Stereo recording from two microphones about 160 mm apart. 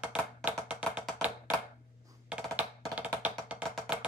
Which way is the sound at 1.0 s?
Centre (ahead or behind).